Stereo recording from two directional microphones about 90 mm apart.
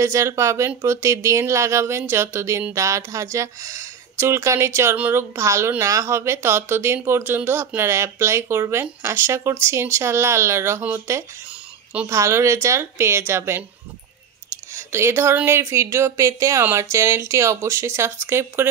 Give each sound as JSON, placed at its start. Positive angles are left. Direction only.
{"t": 0.0, "sound": "speech", "side_deg": -35}
{"t": 14.7, "sound": "a sound", "side_deg": -30}
{"t": 15.4, "sound": "speech", "side_deg": -30}